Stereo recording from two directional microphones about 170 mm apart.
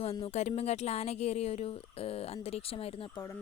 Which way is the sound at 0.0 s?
35° left (ahead or behind).